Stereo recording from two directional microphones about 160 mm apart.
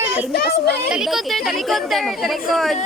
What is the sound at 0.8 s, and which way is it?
A woman's voice, 5° right (ahead or behind).